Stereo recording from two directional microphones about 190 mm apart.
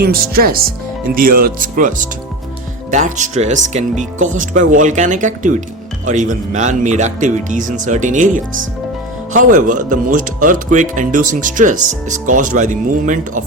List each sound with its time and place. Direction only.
0.0 s speech: 50° right (ahead or behind)
9.3 s speech: 45° right (ahead or behind)